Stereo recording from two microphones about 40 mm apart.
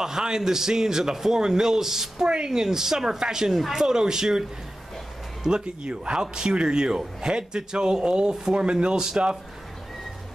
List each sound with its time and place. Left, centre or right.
0.0 s a man's voice: centre